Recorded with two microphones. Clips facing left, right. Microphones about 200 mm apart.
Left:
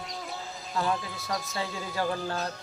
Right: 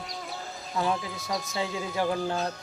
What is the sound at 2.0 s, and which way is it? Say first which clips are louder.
Music: right 3 dB; 5° right (ahead or behind).